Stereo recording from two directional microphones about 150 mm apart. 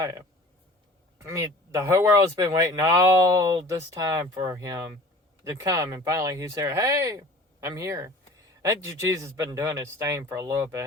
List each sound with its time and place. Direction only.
1.3 s speech: 20° right (ahead or behind)